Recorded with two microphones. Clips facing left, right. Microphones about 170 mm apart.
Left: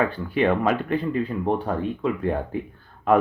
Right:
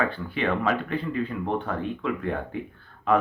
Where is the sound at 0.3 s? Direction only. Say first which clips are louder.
Left 6 dB; 45° left (ahead or behind).